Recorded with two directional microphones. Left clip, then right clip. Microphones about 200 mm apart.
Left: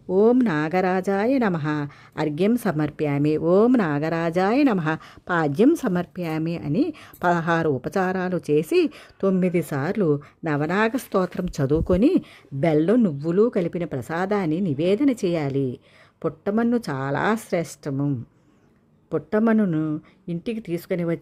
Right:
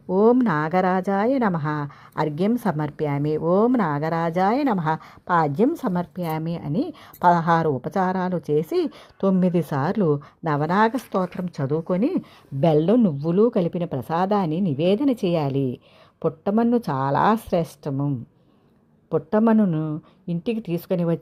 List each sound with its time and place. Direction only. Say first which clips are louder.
0.1 s speech: even; 10° left (ahead or behind)
11.1 s speech: left 2 dB; 25° left (ahead or behind)
12.2 s speech: right 2 dB; 5° left (ahead or behind)
19.1 s speech: right 2 dB; 5° left (ahead or behind)